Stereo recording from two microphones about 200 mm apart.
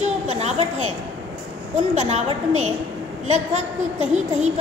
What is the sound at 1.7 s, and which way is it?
A woman's voice, 35° right (ahead or behind).